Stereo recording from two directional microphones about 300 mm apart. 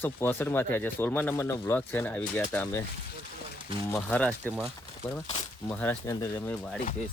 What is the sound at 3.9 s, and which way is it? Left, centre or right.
Speech, centre.